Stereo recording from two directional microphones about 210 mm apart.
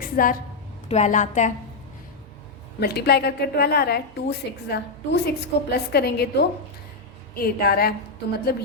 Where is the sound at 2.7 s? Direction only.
50° left (ahead or behind).